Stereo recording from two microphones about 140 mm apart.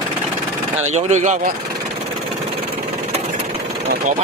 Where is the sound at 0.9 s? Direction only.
55° right (ahead or behind).